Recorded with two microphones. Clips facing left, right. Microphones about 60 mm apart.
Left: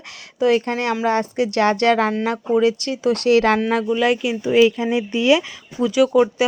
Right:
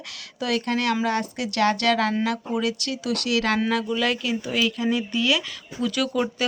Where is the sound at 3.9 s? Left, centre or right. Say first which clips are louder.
Left 6 dB; left.